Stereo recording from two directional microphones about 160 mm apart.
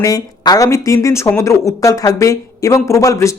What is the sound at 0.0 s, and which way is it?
Speech, 20° left (ahead or behind).